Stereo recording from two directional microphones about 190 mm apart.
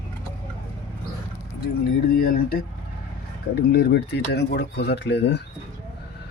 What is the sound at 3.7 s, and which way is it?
Speech, 60° left (ahead or behind).